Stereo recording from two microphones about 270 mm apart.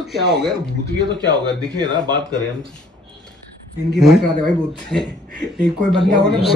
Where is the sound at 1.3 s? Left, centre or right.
Centre.